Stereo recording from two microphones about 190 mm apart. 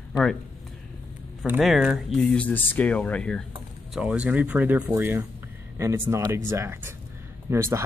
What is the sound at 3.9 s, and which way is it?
Speech, 5° right (ahead or behind).